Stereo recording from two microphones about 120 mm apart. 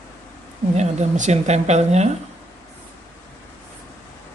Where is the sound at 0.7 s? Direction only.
80° right.